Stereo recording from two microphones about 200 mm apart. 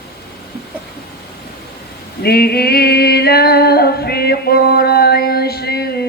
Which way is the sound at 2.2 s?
50° left (ahead or behind).